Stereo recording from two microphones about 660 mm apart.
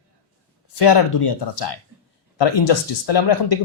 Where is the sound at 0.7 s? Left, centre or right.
Left.